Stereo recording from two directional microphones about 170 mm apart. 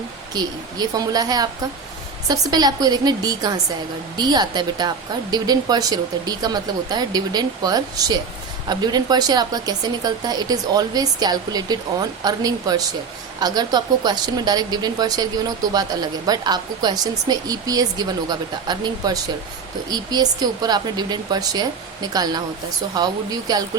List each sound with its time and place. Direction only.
0.3 s speech: 20° right (ahead or behind)